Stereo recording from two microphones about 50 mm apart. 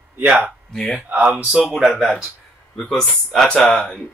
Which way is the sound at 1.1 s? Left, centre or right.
Right.